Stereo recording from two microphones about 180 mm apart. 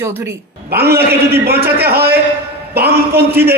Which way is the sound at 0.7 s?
60° right (ahead or behind).